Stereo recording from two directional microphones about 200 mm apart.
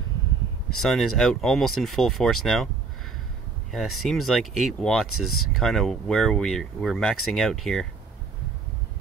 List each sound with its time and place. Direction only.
0.7 s speech: centre (ahead or behind)
3.7 s speech: centre (ahead or behind)
5.0 s speech: 90° left
5.6 s speech: centre (ahead or behind)